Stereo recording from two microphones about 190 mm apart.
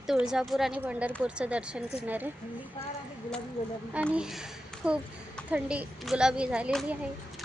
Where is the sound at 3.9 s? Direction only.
5° right (ahead or behind).